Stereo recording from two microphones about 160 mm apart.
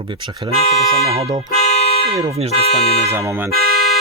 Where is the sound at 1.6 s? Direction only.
40° left (ahead or behind).